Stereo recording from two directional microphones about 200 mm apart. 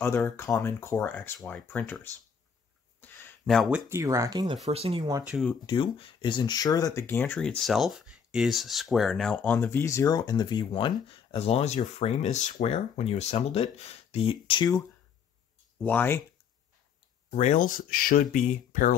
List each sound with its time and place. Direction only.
0.0 s speech: 10° left (ahead or behind)
3.0 s a sound: 10° left (ahead or behind)
3.9 s speech: 15° right (ahead or behind)
4.6 s speech: 30° right (ahead or behind)
5.3 s speech: 5° left (ahead or behind)
5.7 s speech: 25° left (ahead or behind)
15.8 s speech: 10° left (ahead or behind)
17.4 s speech: 40° left (ahead or behind)